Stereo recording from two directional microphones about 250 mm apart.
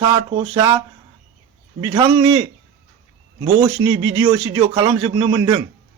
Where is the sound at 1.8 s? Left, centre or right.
Centre.